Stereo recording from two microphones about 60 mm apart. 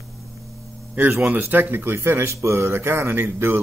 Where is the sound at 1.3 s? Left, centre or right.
Right.